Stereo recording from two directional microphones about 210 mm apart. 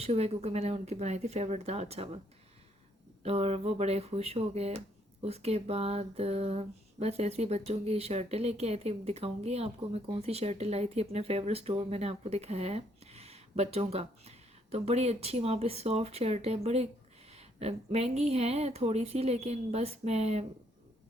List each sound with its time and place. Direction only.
0.0 s speech: 30° right (ahead or behind)
3.2 s speech: 30° right (ahead or behind)